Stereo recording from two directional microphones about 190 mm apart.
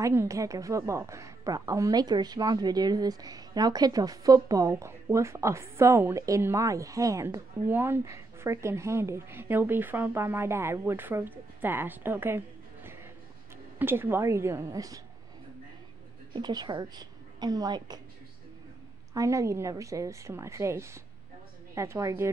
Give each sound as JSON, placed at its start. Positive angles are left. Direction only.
{"t": 0.0, "sound": "a woman's voice", "side_deg": -15}
{"t": 16.3, "sound": "a woman's voice", "side_deg": -20}
{"t": 19.1, "sound": "a woman's voice", "side_deg": -15}